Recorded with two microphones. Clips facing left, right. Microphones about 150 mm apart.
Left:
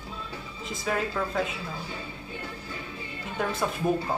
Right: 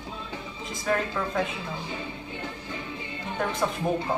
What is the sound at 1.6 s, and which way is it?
Music, 25° right (ahead or behind).